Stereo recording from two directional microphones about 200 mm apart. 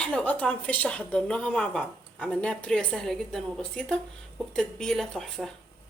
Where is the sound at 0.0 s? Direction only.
5° left (ahead or behind).